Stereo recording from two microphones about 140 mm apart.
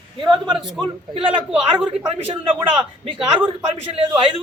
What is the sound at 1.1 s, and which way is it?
A man's voice, 40° right (ahead or behind).